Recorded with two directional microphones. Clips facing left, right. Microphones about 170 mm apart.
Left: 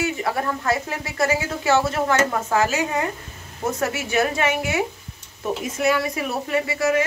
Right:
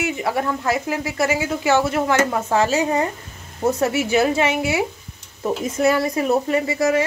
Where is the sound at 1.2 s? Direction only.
20° right (ahead or behind).